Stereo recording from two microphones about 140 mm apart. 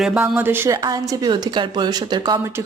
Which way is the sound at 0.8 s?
30° right (ahead or behind).